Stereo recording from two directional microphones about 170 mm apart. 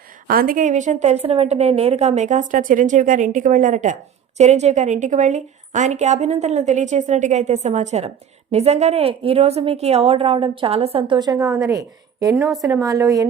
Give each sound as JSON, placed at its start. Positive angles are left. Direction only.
{"t": 0.3, "sound": "a woman's voice", "side_deg": -55}